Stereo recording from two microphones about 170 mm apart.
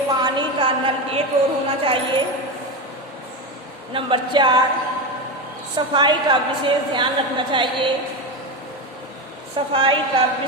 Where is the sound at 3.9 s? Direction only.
30° right (ahead or behind).